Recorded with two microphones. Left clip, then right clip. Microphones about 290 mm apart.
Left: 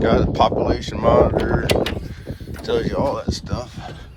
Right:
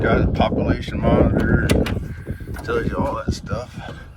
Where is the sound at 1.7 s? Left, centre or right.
Centre.